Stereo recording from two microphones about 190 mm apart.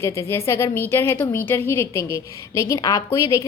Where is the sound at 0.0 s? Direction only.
15° left (ahead or behind).